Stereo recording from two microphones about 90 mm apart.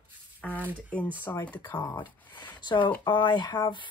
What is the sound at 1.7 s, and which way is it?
Speech, 50° left (ahead or behind).